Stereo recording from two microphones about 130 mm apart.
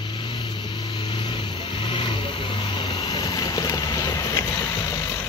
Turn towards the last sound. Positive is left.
turn(degrees=25)  # may be behind; listen again after turning